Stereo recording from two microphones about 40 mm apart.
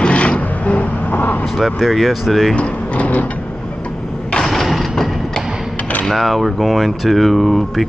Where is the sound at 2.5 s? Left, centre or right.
Left.